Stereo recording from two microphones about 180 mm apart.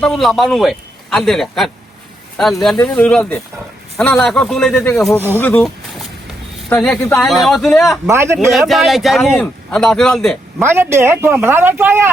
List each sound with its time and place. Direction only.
0.0 s speech: centre (ahead or behind)
6.7 s speech: 10° left (ahead or behind)
8.0 s speech: 15° right (ahead or behind)
8.4 s speech: centre (ahead or behind)
10.6 s speech: 15° right (ahead or behind)